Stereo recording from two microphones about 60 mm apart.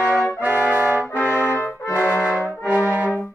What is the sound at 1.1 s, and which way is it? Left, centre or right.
Brass instrument, left.